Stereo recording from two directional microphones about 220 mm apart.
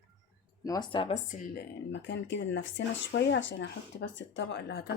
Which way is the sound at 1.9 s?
55° left (ahead or behind).